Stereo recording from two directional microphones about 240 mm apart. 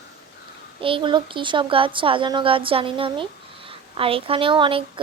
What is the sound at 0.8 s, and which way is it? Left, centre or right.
A woman's voice, right.